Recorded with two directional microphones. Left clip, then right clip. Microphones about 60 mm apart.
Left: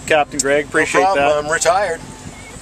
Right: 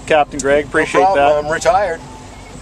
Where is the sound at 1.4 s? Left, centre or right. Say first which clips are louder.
Right 1 dB; right.